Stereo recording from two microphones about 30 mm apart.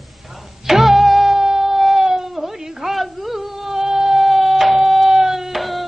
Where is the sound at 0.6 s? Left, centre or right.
Centre.